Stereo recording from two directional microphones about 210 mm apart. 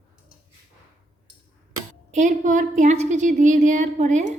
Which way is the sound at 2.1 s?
35° right (ahead or behind).